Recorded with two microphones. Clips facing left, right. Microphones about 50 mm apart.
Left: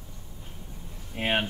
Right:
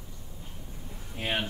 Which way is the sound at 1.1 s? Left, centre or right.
Left.